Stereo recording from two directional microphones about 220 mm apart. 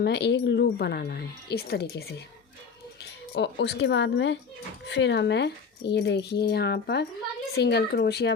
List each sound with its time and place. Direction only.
0.0 s speech: 50° left (ahead or behind)